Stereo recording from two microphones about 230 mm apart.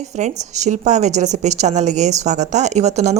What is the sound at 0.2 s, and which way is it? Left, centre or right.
A woman's voice, right.